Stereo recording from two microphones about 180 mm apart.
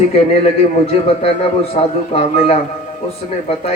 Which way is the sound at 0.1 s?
35° left (ahead or behind).